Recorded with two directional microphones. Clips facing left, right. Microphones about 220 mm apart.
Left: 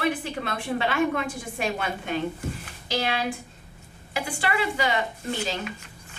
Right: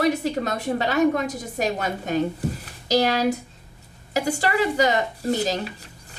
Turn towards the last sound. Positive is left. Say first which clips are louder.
# right 6 dB
turn(degrees=-40)  # may be behind; listen again after turning